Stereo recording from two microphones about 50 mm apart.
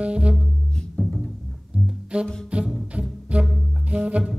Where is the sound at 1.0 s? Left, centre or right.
Centre.